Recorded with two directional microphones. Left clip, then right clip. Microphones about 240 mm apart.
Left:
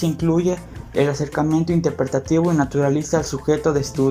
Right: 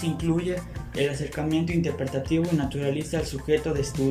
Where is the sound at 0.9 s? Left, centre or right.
Centre.